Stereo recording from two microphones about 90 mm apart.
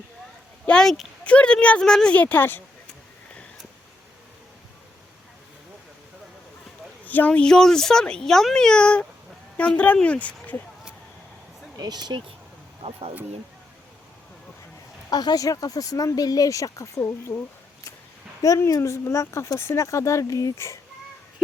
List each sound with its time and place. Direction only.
0.6 s a sound: 10° left (ahead or behind)
1.2 s speech: 15° left (ahead or behind)
7.0 s speech: 20° left (ahead or behind)
11.8 s speech: 50° right (ahead or behind)
15.1 s speech: 45° left (ahead or behind)
18.4 s speech: 40° left (ahead or behind)